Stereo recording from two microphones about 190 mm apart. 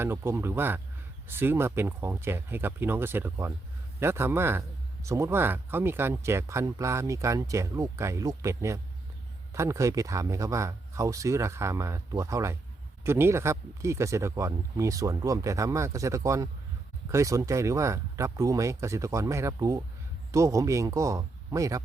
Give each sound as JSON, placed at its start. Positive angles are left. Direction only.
{"t": 0.0, "sound": "speech", "side_deg": -15}